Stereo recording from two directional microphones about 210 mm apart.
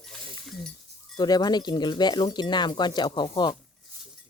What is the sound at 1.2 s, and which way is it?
Speech, 20° left (ahead or behind).